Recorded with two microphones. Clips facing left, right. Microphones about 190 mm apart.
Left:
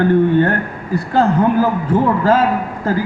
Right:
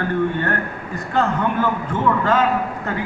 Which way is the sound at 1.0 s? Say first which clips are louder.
Left 6 dB; 35° left (ahead or behind).